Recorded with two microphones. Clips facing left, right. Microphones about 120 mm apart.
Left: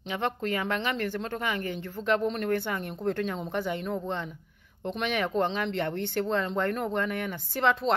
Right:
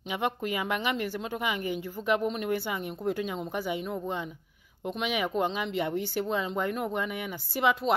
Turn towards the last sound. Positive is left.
turn(degrees=-10)  # may be behind; listen again after turning